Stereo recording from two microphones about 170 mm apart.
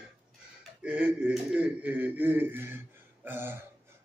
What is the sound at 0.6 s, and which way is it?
Speech, 5° right (ahead or behind).